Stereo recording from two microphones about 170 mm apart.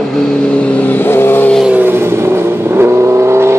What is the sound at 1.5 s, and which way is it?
Vehicle, 5° right (ahead or behind).